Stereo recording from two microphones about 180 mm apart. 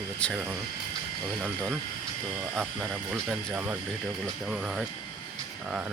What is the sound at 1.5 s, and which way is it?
Speech, 10° right (ahead or behind).